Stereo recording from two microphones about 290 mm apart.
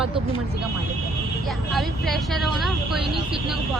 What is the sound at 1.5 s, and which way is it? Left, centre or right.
Speech, centre.